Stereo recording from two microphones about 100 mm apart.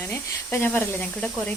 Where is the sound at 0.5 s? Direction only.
20° left (ahead or behind).